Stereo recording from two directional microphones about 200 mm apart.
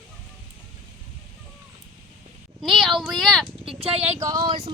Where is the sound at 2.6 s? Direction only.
Centre (ahead or behind).